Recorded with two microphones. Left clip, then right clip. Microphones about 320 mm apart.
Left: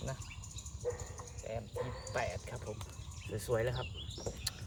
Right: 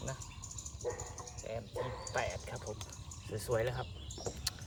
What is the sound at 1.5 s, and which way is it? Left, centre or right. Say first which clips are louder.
Speech: even; centre.